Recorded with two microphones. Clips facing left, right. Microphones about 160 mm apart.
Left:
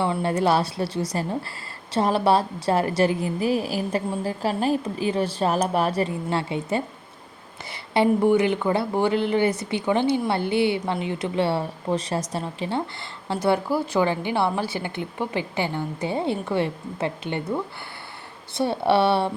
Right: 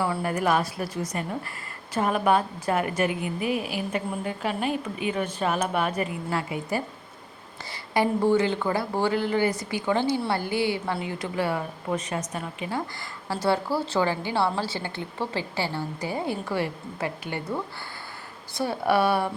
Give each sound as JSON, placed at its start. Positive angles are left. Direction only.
{"t": 0.0, "sound": "a woman's voice", "side_deg": 25}
{"t": 18.5, "sound": "speech", "side_deg": 25}